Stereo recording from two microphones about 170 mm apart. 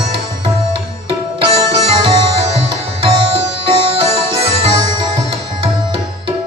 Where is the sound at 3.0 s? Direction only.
30° right (ahead or behind).